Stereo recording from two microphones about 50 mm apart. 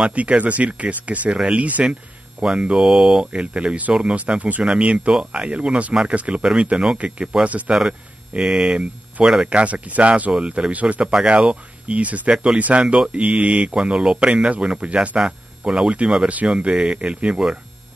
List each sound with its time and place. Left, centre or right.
0.0 s speech: right
6.7 s speech: centre
7.4 s speech: right
8.3 s speech: centre
12.8 s speech: centre
13.1 s speech: right
13.7 s speech: centre